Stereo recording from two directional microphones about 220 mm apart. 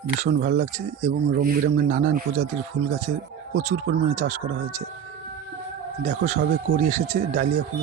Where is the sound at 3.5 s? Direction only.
40° right (ahead or behind).